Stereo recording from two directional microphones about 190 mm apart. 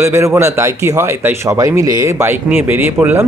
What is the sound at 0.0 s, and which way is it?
Speech, 15° right (ahead or behind).